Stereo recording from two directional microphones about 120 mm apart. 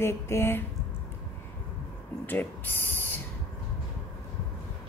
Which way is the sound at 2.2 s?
15° left (ahead or behind).